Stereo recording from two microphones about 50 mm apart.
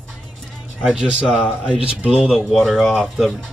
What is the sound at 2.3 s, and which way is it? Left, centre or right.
Speech, centre.